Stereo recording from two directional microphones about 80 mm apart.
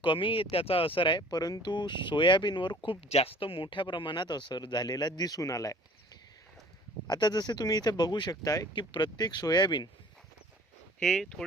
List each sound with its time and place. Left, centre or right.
0.0 s speech: left
1.4 s speech: left
1.6 s speech: left
7.1 s speech: left
8.7 s speech: left
11.0 s speech: centre